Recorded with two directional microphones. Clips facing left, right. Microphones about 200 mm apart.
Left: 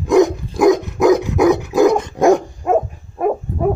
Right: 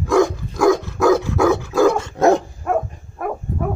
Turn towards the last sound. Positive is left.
turn(degrees=20)  # may be behind; listen again after turning